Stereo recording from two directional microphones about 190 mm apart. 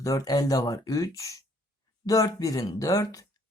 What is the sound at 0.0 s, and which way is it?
Speech, 20° left (ahead or behind).